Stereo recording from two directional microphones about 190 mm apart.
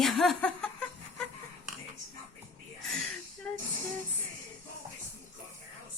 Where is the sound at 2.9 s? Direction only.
5° left (ahead or behind).